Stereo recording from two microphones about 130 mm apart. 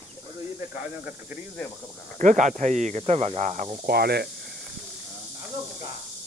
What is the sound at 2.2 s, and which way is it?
Speech, 75° right (ahead or behind).